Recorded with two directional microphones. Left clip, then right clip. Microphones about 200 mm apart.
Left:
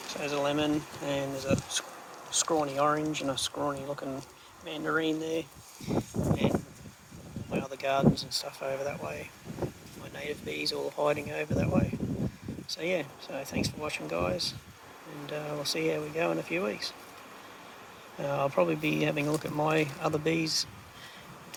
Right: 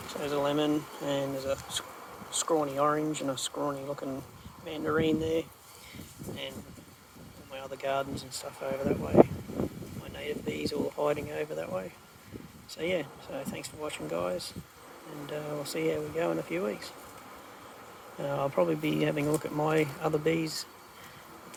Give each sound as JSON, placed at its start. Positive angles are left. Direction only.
{"t": 0.1, "sound": "speech", "side_deg": -10}
{"t": 7.5, "sound": "speech", "side_deg": -5}
{"t": 10.2, "sound": "speech", "side_deg": 0}
{"t": 18.2, "sound": "speech", "side_deg": -5}